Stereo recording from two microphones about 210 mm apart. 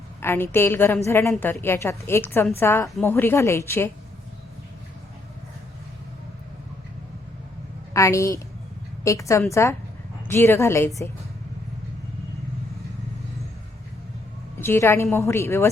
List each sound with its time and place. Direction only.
0.2 s a woman's voice: 10° left (ahead or behind)
7.9 s a woman's voice: 15° left (ahead or behind)
14.6 s a woman's voice: 10° left (ahead or behind)